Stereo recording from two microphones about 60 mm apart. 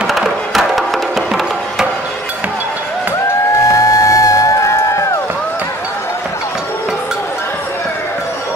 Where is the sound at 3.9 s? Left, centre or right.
Left.